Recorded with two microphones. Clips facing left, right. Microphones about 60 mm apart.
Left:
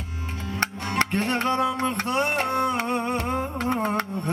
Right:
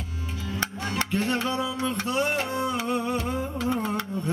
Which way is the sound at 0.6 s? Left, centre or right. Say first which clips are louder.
Left 5 dB; left.